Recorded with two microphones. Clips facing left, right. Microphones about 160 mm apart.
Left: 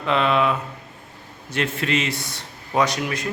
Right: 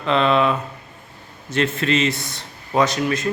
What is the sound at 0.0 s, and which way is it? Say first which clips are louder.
A man's voice: right 2 dB; 10° left (ahead or behind).